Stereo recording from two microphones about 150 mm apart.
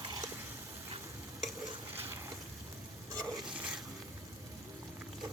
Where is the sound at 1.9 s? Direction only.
15° right (ahead or behind).